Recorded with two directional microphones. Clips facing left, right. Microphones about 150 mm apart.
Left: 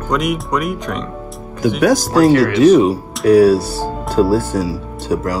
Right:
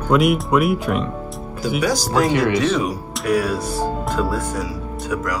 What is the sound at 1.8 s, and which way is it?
Speech, 50° left (ahead or behind).